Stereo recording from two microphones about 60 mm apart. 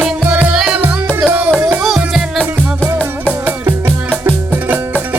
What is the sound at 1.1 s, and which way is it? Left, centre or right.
Music, right.